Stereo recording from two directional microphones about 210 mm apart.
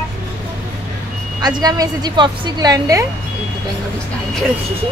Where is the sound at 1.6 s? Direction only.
20° right (ahead or behind).